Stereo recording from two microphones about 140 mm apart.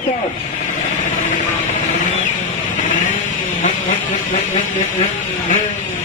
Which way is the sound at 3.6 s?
65° left (ahead or behind).